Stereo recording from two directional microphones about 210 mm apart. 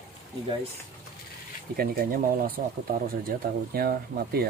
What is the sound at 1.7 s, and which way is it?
Speech, 45° right (ahead or behind).